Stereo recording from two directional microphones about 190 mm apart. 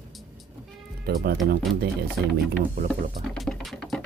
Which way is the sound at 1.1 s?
55° right (ahead or behind).